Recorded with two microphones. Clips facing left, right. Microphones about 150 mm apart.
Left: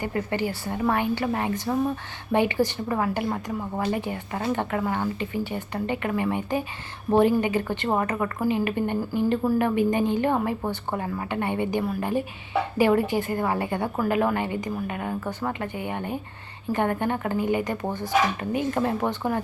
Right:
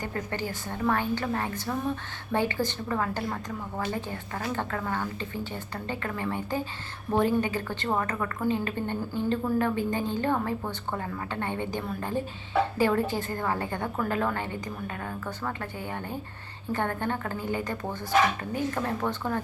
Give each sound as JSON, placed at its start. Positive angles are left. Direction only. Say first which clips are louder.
{"t": 0.0, "sound": "a woman's voice", "louder": "left 6 dB", "side_deg": 10}